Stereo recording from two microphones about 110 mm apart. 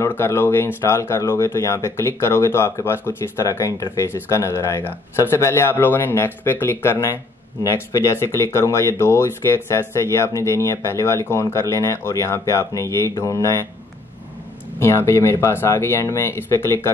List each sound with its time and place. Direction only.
0.0 s speech: 25° left (ahead or behind)
14.8 s speech: 25° left (ahead or behind)